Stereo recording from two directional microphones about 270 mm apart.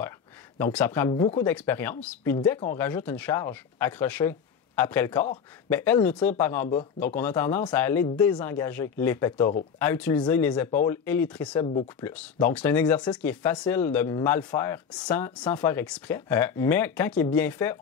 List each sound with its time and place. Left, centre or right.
0.6 s speech: centre
11.6 s speech: left
12.0 s speech: centre